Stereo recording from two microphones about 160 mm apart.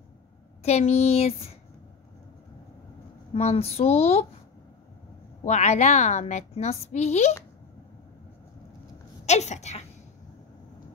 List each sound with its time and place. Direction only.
0.7 s speech: 40° left (ahead or behind)
3.3 s speech: 40° left (ahead or behind)
5.4 s a woman's voice: 45° left (ahead or behind)
9.2 s a woman's voice: 45° left (ahead or behind)